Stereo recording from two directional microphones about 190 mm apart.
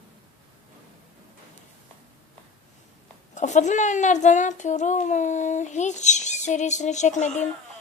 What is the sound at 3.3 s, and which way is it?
A woman's voice, 40° left (ahead or behind).